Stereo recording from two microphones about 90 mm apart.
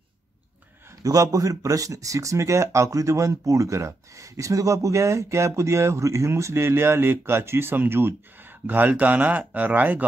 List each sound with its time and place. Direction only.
0.8 s speech: 40° right (ahead or behind); by 10.0 s 20° right (ahead or behind)